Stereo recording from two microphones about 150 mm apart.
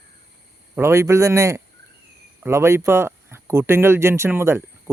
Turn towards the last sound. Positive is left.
turn(degrees=-15)  # may be behind; listen again after turning